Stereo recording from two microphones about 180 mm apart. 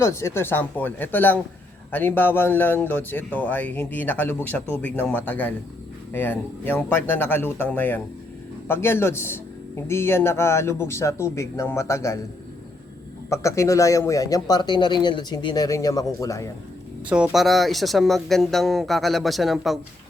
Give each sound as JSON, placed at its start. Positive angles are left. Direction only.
{"t": 0.0, "sound": "speech", "side_deg": 15}
{"t": 13.3, "sound": "a man's voice", "side_deg": 15}
{"t": 17.1, "sound": "speech", "side_deg": -5}